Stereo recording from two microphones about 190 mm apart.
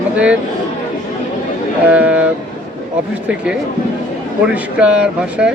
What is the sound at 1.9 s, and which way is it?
Speech, 5° right (ahead or behind).